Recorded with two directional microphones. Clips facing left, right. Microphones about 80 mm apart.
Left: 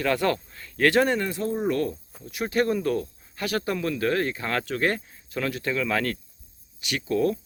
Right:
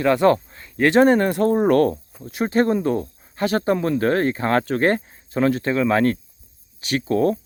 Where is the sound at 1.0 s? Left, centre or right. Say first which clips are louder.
Right 9 dB; right.